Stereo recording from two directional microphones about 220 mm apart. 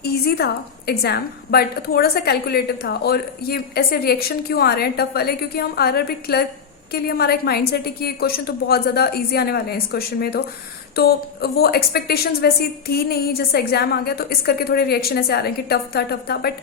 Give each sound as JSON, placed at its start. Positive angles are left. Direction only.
{"t": 0.0, "sound": "a woman's voice", "side_deg": 45}